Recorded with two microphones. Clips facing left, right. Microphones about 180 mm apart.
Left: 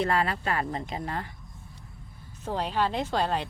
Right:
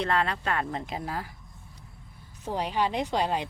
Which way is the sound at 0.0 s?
5° left (ahead or behind).